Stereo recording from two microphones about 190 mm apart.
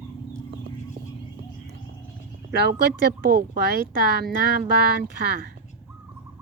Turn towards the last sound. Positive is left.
turn(degrees=-55)  # may be behind; listen again after turning